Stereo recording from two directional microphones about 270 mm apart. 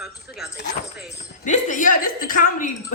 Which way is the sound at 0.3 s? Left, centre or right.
Centre.